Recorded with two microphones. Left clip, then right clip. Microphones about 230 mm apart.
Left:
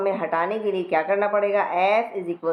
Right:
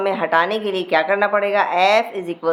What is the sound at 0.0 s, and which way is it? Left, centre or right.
Speech, right.